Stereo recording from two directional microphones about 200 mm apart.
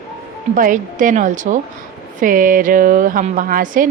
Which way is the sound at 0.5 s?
40° right (ahead or behind).